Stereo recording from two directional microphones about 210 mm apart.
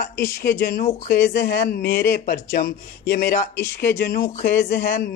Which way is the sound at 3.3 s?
10° left (ahead or behind).